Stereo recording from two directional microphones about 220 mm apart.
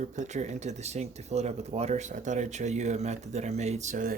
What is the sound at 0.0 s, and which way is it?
Speech, 35° right (ahead or behind).